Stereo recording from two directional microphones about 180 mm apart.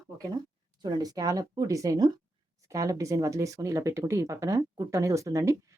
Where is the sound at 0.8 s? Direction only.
25° right (ahead or behind).